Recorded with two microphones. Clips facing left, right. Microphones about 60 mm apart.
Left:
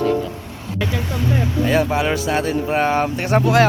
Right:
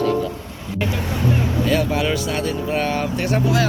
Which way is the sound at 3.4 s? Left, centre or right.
Left.